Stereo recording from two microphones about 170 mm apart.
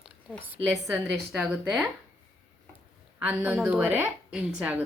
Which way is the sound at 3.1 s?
10° right (ahead or behind).